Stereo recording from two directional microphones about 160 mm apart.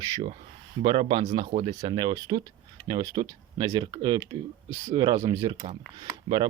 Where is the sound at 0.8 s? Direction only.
35° right (ahead or behind).